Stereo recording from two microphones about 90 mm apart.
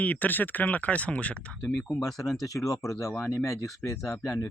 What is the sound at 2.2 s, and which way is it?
Speech, centre (ahead or behind).